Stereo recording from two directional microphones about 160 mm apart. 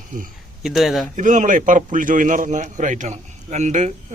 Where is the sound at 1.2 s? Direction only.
50° right (ahead or behind).